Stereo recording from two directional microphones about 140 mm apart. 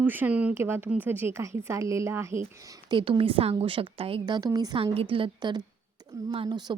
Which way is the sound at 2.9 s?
35° right (ahead or behind).